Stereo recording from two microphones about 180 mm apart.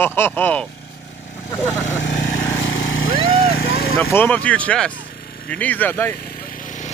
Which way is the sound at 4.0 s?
10° left (ahead or behind).